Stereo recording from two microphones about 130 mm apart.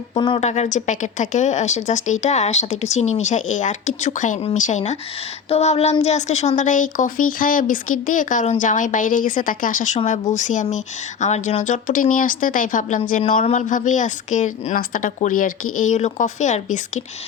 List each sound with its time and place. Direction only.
0.1 s a woman's voice: 40° left (ahead or behind)
0.3 s speech: 60° left (ahead or behind); by 10.0 s 80° left
10.1 s a woman's voice: 70° left (ahead or behind)